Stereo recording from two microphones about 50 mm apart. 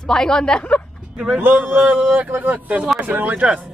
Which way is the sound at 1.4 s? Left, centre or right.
Right.